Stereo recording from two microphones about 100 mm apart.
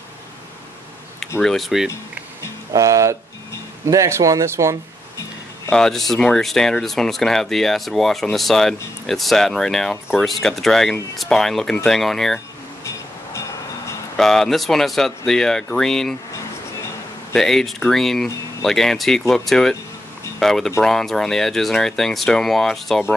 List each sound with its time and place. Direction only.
1.4 s speech: centre (ahead or behind)
2.7 s speech: 35° right (ahead or behind)
5.7 s speech: 5° left (ahead or behind)
12.8 s vehicle: 30° left (ahead or behind)
14.1 s speech: 5° left (ahead or behind)
17.3 s speech: 5° left (ahead or behind)